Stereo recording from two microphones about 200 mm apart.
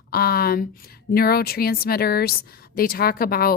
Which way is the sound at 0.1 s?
50° left (ahead or behind).